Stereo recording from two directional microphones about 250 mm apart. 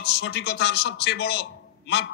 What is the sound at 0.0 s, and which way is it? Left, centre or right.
A man's voice, left.